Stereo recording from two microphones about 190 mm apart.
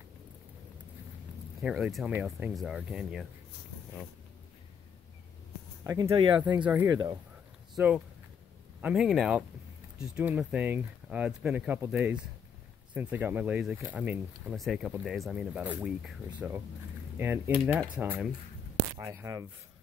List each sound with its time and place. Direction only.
1.6 s speech: 5° right (ahead or behind)
6.0 s speech: 25° right (ahead or behind)
6.6 s speech: 10° right (ahead or behind)
6.9 s speech: 20° right (ahead or behind)
7.7 s speech: 5° right (ahead or behind)